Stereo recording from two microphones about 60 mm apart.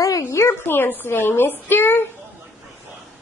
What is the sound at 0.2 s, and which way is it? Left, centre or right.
A woman's voice, left.